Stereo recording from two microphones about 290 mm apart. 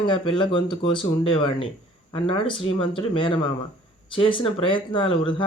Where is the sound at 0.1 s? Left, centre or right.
Centre.